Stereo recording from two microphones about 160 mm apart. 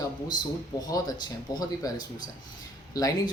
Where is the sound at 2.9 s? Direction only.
20° left (ahead or behind).